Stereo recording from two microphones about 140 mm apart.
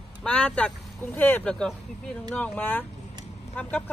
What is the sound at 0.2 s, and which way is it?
Speech, 5° left (ahead or behind).